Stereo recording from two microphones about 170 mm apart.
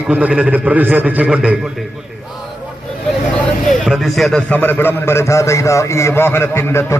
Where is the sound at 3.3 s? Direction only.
Centre (ahead or behind).